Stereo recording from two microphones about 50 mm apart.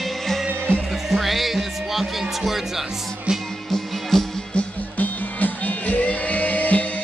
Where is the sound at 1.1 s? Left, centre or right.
Centre.